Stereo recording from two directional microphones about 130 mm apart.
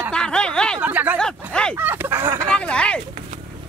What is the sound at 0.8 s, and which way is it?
A woman's voice, 10° right (ahead or behind).